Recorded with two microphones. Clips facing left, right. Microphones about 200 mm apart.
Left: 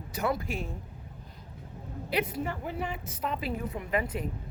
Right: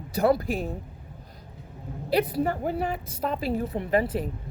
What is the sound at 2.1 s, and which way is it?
A woman's voice, 35° right (ahead or behind).